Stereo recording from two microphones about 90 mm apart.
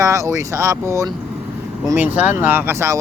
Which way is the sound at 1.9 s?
20° right (ahead or behind).